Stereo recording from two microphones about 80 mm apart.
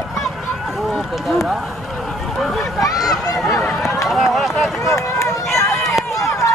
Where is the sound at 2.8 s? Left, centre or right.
Left.